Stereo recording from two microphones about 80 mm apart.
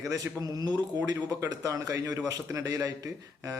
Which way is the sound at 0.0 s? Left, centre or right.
Right.